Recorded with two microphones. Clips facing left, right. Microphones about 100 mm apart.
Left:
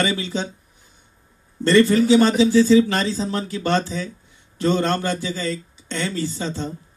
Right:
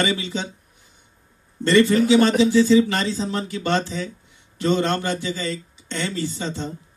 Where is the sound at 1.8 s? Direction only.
Centre (ahead or behind).